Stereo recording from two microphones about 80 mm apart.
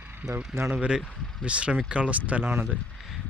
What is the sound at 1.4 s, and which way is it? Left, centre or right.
Speech, centre.